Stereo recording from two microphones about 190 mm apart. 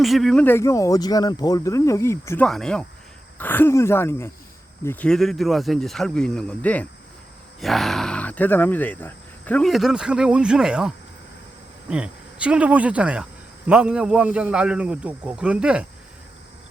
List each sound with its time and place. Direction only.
0.0 s speech: centre (ahead or behind)
2.5 s speech: 5° left (ahead or behind)